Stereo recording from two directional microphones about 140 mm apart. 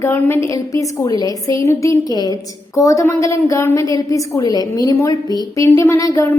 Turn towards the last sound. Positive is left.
turn(degrees=25)  # may be behind; listen again after turning